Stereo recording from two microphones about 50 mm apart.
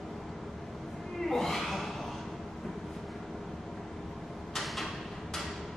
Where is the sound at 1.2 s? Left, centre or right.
Centre.